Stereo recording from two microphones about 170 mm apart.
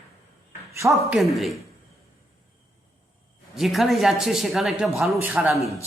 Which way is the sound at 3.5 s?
Centre (ahead or behind).